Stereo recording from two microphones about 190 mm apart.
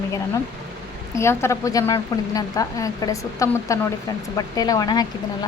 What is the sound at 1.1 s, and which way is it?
A woman's voice, 15° left (ahead or behind).